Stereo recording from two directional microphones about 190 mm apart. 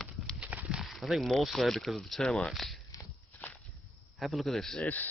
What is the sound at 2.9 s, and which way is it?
Walk, 20° left (ahead or behind).